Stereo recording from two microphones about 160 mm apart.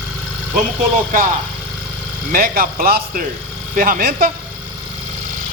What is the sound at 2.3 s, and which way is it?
Speech, 65° right (ahead or behind).